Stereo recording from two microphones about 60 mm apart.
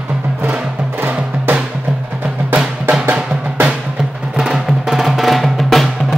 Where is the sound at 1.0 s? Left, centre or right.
Right.